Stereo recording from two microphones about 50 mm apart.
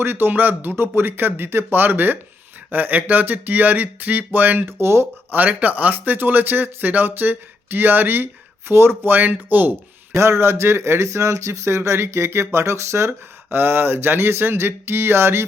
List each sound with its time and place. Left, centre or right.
0.0 s speech: right
4.6 s speech: right
5.5 s speech: right
10.1 s speech: right
11.8 s speech: right
13.5 s speech: right